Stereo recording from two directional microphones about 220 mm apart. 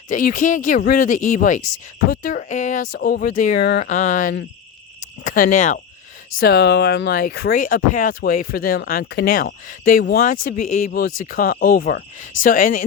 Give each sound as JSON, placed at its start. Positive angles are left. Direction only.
{"t": 0.1, "sound": "speech", "side_deg": 40}
{"t": 3.6, "sound": "speech", "side_deg": 50}
{"t": 3.8, "sound": "speech", "side_deg": 35}